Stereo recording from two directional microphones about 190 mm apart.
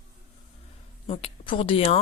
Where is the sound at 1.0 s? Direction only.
30° left (ahead or behind).